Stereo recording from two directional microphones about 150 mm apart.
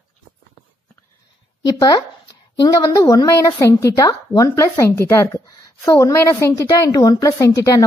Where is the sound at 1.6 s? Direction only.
25° left (ahead or behind).